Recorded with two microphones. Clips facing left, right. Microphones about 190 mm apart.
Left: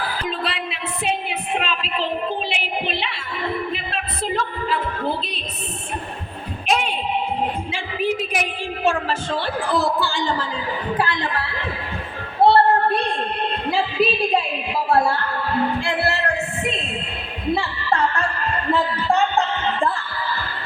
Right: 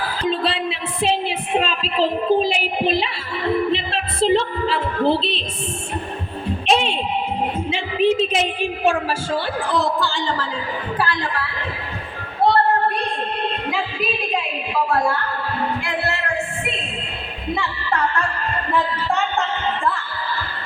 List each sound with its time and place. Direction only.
0.3 s music: 30° right (ahead or behind)
3.7 s a sound: 30° right (ahead or behind)
6.7 s a sound: 30° right (ahead or behind)
7.7 s a woman's voice: 25° right (ahead or behind)
9.3 s speech: 5° left (ahead or behind)
10.9 s speech: 20° left (ahead or behind)
12.5 s a sound: 30° left (ahead or behind)
14.8 s music: 30° left (ahead or behind)
17.5 s music: 35° left (ahead or behind)